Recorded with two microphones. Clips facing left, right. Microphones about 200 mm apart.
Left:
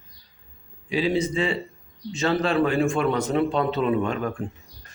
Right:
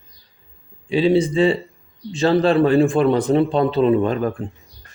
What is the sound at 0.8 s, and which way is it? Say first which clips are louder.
A man's voice: right 7 dB; 30° right (ahead or behind).